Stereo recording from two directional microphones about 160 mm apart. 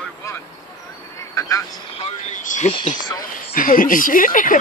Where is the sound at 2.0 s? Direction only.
45° left (ahead or behind).